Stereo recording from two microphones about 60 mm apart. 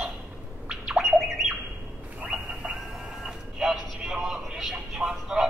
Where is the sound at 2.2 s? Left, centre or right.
Centre.